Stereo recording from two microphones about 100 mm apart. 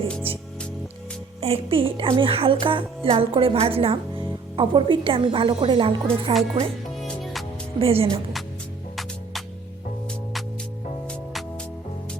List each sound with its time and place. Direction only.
1.4 s a woman's voice: 80° right; by 6.3 s 55° right (ahead or behind)
6.9 s music: centre (ahead or behind)
7.8 s a woman's voice: 70° right (ahead or behind)